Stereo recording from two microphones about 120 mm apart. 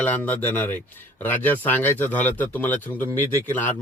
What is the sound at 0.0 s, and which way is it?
Speech, 15° left (ahead or behind).